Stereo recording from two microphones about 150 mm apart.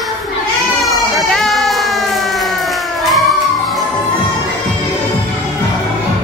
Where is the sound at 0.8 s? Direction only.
Centre (ahead or behind).